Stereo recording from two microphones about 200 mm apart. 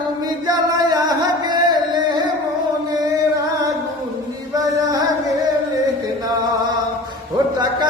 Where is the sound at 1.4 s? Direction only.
20° right (ahead or behind).